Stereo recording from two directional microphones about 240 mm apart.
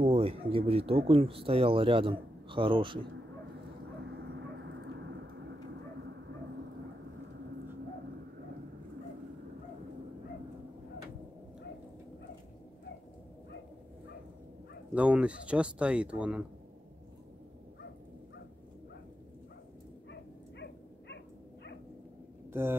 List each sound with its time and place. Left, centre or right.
0.0 s speech: right
4.0 s vehicle: right
15.0 s speech: centre
20.1 s dog: left
22.5 s speech: centre